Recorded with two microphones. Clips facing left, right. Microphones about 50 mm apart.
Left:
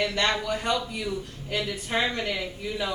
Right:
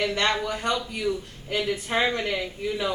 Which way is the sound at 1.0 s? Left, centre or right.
Centre.